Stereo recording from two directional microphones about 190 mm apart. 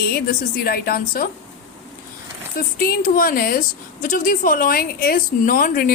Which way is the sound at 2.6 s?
50° left (ahead or behind).